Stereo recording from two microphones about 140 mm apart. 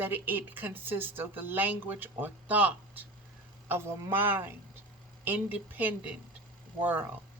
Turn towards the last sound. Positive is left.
turn(degrees=-15)  # may be behind; listen again after turning